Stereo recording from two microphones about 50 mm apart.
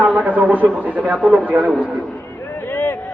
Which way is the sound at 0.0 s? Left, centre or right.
Right.